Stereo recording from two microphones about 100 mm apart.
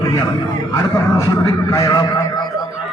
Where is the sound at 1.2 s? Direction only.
40° left (ahead or behind).